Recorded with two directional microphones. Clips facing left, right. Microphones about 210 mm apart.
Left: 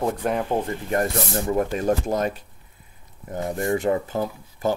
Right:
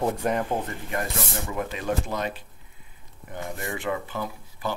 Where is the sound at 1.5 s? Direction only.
45° left (ahead or behind).